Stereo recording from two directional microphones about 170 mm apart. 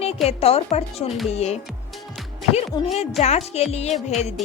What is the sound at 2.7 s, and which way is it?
Speech, 25° left (ahead or behind).